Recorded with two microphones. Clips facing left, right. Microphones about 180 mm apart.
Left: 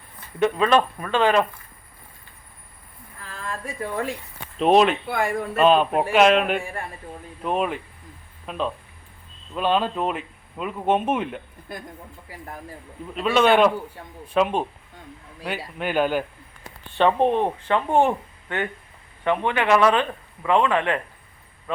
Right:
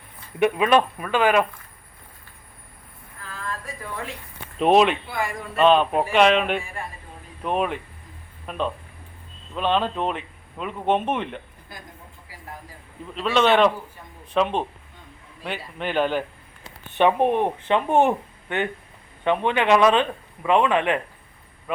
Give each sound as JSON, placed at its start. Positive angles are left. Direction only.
{"t": 0.3, "sound": "speech", "side_deg": -15}
{"t": 4.5, "sound": "speech", "side_deg": 0}
{"t": 5.0, "sound": "speech", "side_deg": 60}
{"t": 5.5, "sound": "speech", "side_deg": 5}
{"t": 13.1, "sound": "speech", "side_deg": 5}
{"t": 17.0, "sound": "speech", "side_deg": -15}